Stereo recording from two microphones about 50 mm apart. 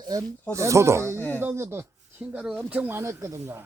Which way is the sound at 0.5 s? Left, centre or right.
Right.